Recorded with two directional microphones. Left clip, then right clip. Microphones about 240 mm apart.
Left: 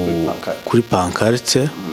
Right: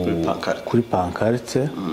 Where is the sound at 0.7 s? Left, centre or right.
Left.